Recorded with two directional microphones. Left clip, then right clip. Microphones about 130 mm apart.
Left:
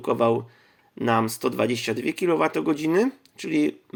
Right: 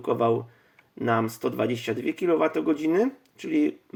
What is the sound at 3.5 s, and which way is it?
Speech, 60° left (ahead or behind).